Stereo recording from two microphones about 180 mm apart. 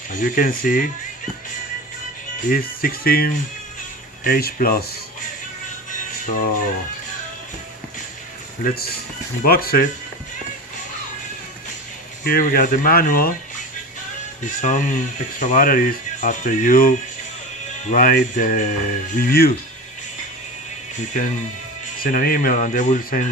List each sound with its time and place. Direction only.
0.1 s speech: 50° left (ahead or behind)
2.5 s speech: 50° left (ahead or behind)
5.9 s music: 50° left (ahead or behind)
8.6 s speech: 60° left (ahead or behind)
12.2 s speech: 50° left (ahead or behind)
14.4 s speech: 45° left (ahead or behind)
22.0 s speech: 55° left (ahead or behind)